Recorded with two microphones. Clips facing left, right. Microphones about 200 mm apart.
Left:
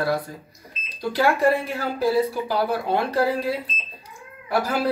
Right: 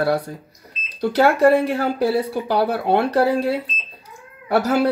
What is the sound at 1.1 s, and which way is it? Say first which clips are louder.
Speech: right 5 dB; 65° right (ahead or behind).